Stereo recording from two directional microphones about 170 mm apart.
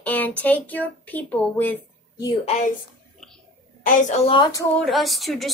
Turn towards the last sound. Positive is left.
turn(degrees=0)  # may be behind; listen again after turning